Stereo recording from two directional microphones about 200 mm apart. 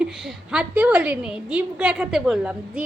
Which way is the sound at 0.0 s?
5° right (ahead or behind).